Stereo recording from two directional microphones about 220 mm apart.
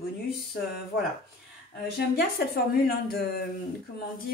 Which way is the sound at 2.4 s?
45° left (ahead or behind).